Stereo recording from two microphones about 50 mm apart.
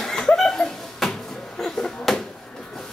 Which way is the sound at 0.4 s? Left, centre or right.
Centre.